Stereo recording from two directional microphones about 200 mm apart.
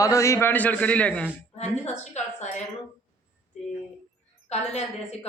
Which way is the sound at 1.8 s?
35° left (ahead or behind).